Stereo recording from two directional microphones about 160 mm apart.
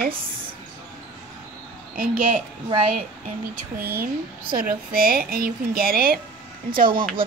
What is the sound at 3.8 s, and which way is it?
Speech, 70° right (ahead or behind).